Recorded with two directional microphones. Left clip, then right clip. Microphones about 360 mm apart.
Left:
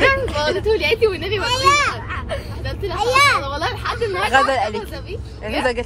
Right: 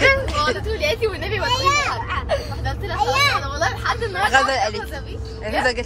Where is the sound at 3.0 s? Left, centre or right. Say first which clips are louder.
Left 4 dB; left.